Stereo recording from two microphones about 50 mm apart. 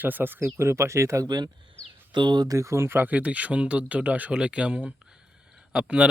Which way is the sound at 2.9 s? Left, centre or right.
Right.